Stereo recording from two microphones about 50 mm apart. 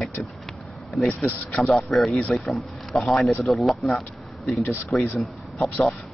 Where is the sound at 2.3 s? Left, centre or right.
Centre.